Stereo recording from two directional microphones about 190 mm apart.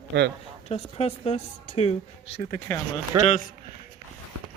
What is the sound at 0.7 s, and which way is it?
A woman's voice, 35° left (ahead or behind).